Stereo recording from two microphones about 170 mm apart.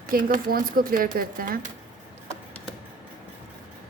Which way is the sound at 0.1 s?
55° right (ahead or behind).